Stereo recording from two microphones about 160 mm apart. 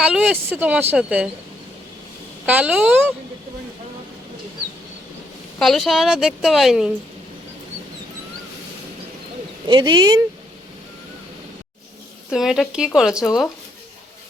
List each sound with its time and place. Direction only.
0.0 s a woman's voice: 5° right (ahead or behind)
2.5 s a woman's voice: 10° right (ahead or behind)
5.5 s a woman's voice: centre (ahead or behind)
9.6 s speech: 30° right (ahead or behind)
12.3 s a woman's voice: centre (ahead or behind)